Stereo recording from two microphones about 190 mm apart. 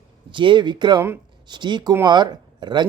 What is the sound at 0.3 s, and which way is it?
Speech, 25° right (ahead or behind).